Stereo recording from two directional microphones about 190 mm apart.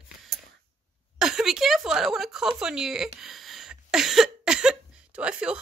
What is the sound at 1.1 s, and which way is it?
Speech, centre (ahead or behind).